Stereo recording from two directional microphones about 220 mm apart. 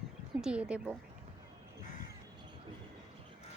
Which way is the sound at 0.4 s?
5° right (ahead or behind).